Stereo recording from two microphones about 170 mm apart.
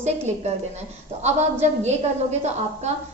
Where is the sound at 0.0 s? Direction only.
40° right (ahead or behind).